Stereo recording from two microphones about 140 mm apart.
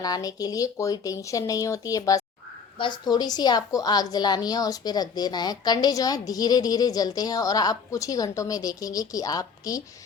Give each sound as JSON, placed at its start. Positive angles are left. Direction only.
{"t": 0.0, "sound": "a woman's voice", "side_deg": 25}